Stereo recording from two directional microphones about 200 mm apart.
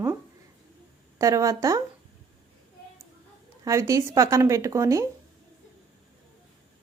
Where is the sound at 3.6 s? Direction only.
15° right (ahead or behind).